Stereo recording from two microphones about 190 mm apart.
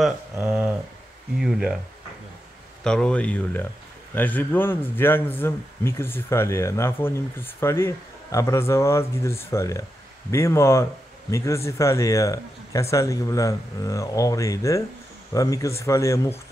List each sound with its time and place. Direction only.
0.0 s speech: 5° right (ahead or behind)
2.8 s a man's voice: 5° left (ahead or behind)